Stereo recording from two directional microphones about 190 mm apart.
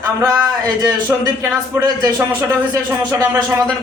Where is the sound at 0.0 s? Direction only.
20° right (ahead or behind).